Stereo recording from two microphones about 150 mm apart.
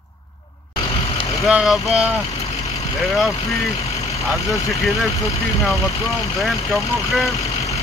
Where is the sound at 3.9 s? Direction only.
20° left (ahead or behind).